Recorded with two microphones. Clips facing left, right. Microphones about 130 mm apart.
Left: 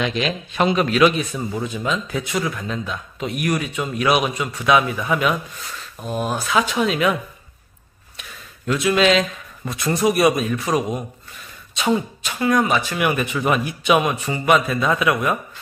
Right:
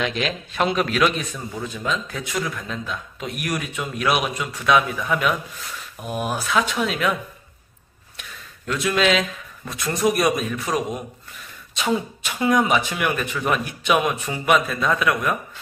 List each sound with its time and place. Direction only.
0.0 s speech: centre (ahead or behind)
5.9 s speech: 10° right (ahead or behind)
6.4 s speech: centre (ahead or behind)
8.6 s speech: 5° left (ahead or behind)
12.4 s speech: 15° right (ahead or behind)
13.0 s a man's voice: 10° left (ahead or behind)